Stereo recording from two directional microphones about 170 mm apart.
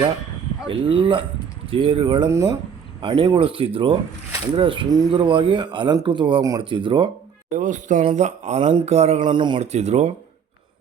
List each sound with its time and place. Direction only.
0.7 s speech: 30° right (ahead or behind)
7.5 s speech: 50° right (ahead or behind)
9.3 s speech: 25° right (ahead or behind)
9.6 s speech: 40° right (ahead or behind)